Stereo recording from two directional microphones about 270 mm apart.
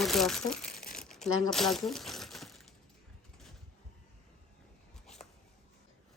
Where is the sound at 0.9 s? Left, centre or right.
Centre.